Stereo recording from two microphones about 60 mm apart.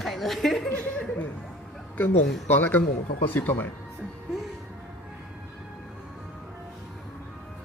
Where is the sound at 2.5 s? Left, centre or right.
Left.